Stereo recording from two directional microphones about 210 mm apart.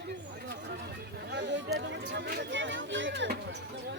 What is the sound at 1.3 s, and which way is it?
Chatter, 55° right (ahead or behind).